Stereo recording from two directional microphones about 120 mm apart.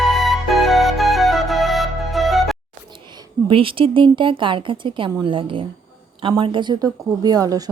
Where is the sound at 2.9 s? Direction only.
40° right (ahead or behind).